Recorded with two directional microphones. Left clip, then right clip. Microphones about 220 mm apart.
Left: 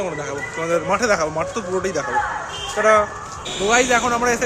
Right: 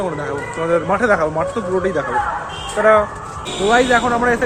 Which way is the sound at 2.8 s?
10° left (ahead or behind).